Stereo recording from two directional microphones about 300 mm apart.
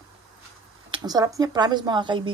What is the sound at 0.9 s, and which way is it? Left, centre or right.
Speech, centre.